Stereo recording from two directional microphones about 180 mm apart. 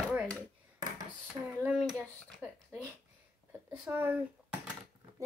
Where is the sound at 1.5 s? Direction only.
10° right (ahead or behind).